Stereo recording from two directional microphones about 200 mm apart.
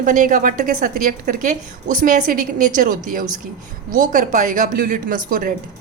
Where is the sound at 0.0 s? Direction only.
40° right (ahead or behind).